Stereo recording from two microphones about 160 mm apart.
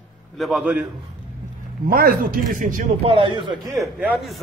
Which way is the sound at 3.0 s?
35° right (ahead or behind).